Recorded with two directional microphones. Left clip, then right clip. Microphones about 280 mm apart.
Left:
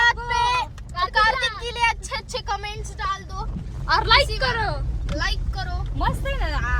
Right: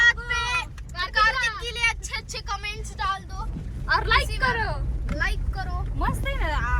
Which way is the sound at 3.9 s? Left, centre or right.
Left.